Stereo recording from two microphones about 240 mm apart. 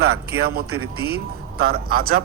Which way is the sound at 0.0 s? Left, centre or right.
Right.